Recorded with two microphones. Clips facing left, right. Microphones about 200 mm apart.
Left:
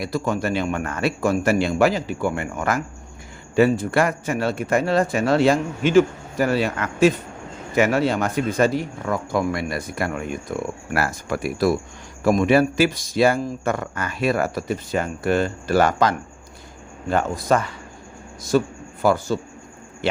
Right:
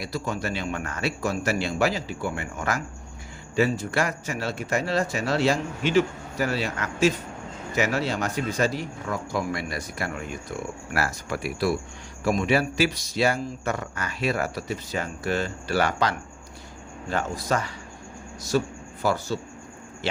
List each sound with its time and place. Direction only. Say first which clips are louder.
0.0 s speech: left 6 dB; 50° left (ahead or behind)
19.0 s speech: left 6 dB; 50° left (ahead or behind)